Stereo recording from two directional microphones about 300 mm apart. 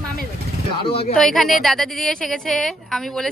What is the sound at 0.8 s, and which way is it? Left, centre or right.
Speech, centre.